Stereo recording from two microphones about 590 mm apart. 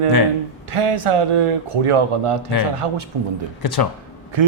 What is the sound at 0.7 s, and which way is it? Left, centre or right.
A man's voice, right.